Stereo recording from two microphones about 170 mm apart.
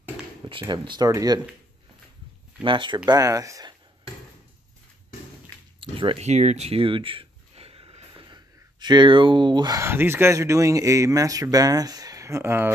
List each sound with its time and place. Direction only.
0.5 s speech: 30° right (ahead or behind)
2.6 s speech: 30° right (ahead or behind)
5.8 s speech: 30° right (ahead or behind); by 12.7 s 15° right (ahead or behind)